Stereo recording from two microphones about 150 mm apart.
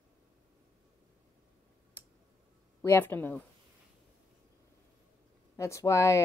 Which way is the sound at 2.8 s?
15° left (ahead or behind).